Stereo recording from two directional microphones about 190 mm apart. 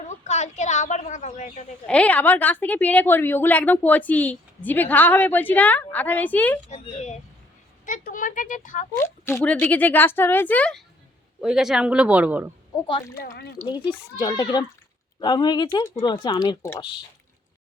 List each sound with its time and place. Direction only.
0.1 s a sound: 40° left (ahead or behind)
1.9 s a woman's voice: 5° left (ahead or behind)
6.7 s speech: 35° left (ahead or behind)
9.2 s a woman's voice: 10° left (ahead or behind); by 12.5 s 10° right (ahead or behind)
13.7 s speech: 20° left (ahead or behind)